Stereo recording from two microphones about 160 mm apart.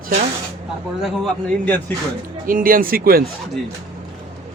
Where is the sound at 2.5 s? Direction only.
60° right (ahead or behind).